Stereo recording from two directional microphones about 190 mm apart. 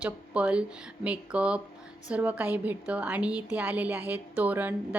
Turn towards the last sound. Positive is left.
turn(degrees=-10)  # may be behind; listen again after turning